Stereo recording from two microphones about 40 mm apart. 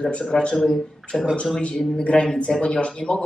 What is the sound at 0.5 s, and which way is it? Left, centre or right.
Speech, centre.